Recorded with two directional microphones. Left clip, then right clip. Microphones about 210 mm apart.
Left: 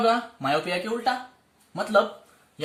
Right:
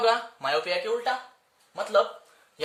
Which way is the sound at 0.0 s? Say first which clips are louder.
Left 1 dB; 45° right (ahead or behind).